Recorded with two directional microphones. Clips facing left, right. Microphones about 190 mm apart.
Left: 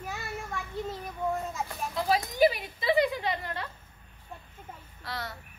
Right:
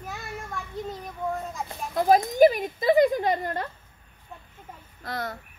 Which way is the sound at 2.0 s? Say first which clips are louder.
Right 7 dB; 45° right (ahead or behind).